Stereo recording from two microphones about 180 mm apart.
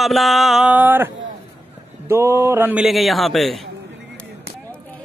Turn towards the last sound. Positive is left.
turn(degrees=0)  # may be behind; listen again after turning